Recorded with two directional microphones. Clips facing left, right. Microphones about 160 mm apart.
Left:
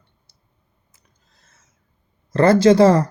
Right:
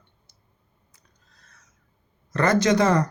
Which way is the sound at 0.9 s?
25° left (ahead or behind).